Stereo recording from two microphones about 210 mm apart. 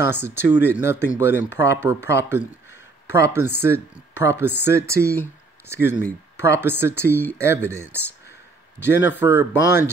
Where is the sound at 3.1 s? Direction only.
15° right (ahead or behind).